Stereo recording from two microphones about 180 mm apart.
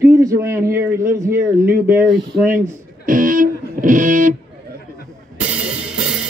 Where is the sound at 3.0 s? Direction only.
50° right (ahead or behind).